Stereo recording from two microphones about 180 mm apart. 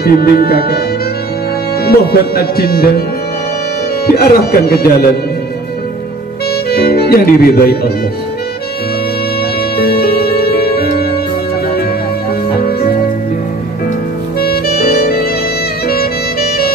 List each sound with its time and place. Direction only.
0.0 s speech: 60° left (ahead or behind)
1.9 s speech: 60° left (ahead or behind)
4.1 s speech: 60° left (ahead or behind)
6.7 s speech: 60° left (ahead or behind)
9.8 s music: 60° left (ahead or behind)
14.4 s music: 60° left (ahead or behind)